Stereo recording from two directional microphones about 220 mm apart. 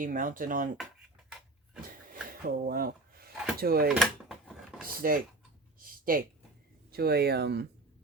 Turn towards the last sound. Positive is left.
turn(degrees=-50)  # may be behind; listen again after turning